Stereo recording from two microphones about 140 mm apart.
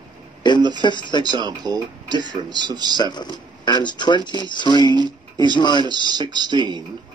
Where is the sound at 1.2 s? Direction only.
30° right (ahead or behind).